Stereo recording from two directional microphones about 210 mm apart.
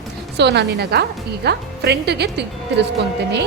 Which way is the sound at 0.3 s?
55° right (ahead or behind).